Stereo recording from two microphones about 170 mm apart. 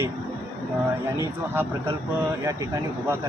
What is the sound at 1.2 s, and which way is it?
Speech, 15° right (ahead or behind).